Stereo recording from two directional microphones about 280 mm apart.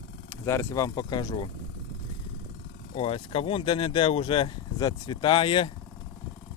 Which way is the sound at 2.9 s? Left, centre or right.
Centre.